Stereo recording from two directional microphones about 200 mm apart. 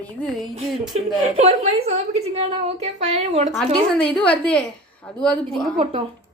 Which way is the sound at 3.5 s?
5° left (ahead or behind).